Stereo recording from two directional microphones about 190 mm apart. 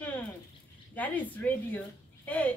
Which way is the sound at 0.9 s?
10° left (ahead or behind).